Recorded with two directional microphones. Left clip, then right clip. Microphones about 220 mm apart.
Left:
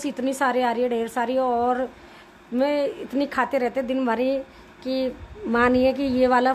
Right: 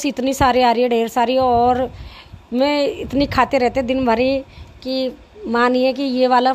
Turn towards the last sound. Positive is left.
turn(degrees=-10)  # may be behind; listen again after turning